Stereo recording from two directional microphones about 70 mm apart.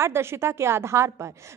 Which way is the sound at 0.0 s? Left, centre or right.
Right.